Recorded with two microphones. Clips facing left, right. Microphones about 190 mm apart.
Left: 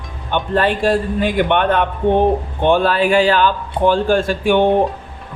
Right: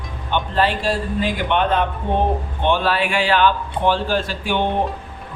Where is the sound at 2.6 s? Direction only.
45° left (ahead or behind).